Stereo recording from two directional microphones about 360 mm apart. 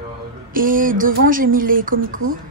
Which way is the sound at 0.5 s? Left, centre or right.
Right.